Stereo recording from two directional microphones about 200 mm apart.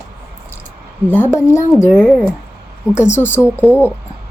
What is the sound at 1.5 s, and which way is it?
A woman's voice, 15° left (ahead or behind).